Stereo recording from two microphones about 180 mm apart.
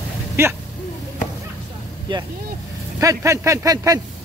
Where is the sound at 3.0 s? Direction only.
15° right (ahead or behind).